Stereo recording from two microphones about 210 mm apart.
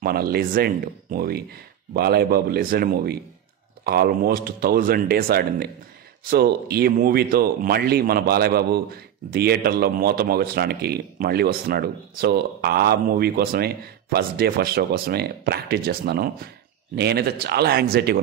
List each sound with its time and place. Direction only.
0.0 s speech: 45° right (ahead or behind)